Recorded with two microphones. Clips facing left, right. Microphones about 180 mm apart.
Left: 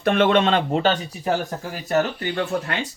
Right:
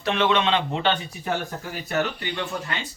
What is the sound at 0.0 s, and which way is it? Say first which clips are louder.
Speech: left 5 dB; 50° left (ahead or behind).